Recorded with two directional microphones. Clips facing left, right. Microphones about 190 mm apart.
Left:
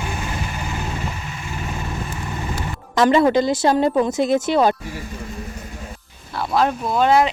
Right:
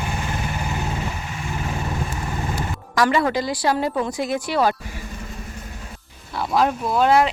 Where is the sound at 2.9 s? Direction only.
25° left (ahead or behind).